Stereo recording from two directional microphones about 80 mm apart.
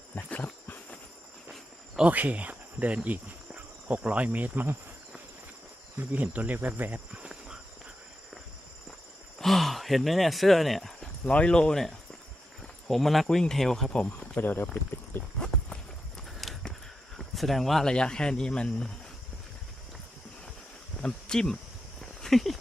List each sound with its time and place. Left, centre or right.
0.2 s a sound: centre
2.0 s speech: centre
6.0 s insect: centre
7.1 s insect: centre
9.4 s speech: centre
11.3 s speech: centre
14.3 s speech: left
15.4 s clip-clop: centre
16.4 s walk: centre
17.2 s speech: centre
21.0 s speech: centre
22.2 s a sound: centre